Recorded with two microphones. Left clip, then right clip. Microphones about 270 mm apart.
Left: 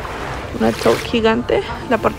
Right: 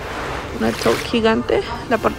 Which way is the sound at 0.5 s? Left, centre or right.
Centre.